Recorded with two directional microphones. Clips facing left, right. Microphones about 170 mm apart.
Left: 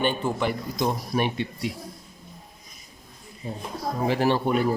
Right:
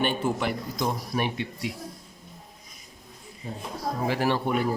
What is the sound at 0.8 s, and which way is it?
Speech, 25° left (ahead or behind).